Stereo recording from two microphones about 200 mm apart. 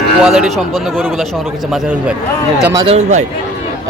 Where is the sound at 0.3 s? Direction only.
Centre (ahead or behind).